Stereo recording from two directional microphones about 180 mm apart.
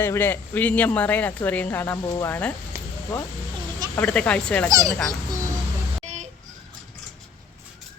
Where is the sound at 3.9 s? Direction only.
5° left (ahead or behind).